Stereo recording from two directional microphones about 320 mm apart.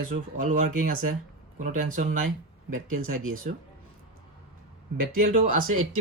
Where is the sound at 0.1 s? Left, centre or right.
Right.